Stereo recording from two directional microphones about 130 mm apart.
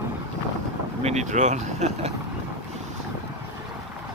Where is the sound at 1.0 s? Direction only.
60° right (ahead or behind).